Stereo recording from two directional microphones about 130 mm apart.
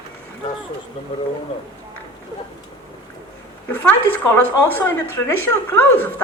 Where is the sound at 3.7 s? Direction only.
15° left (ahead or behind).